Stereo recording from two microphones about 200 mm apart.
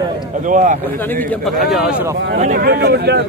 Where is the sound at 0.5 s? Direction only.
40° right (ahead or behind).